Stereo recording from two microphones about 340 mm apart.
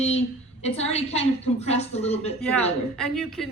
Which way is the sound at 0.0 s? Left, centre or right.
Centre.